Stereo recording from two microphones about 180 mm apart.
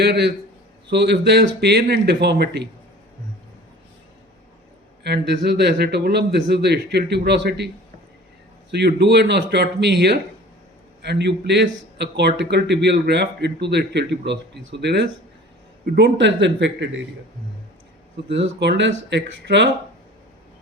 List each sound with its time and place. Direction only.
0.0 s a man's voice: 70° right (ahead or behind)
5.0 s a man's voice: 70° right (ahead or behind)
8.7 s a man's voice: 70° right (ahead or behind)
18.3 s a man's voice: 75° right (ahead or behind)